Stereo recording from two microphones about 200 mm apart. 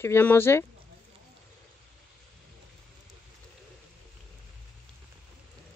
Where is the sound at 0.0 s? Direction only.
10° left (ahead or behind).